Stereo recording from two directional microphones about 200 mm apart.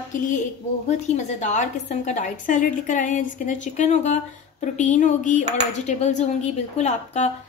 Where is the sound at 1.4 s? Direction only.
35° left (ahead or behind).